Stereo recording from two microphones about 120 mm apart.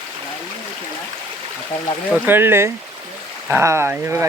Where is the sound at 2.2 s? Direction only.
20° right (ahead or behind).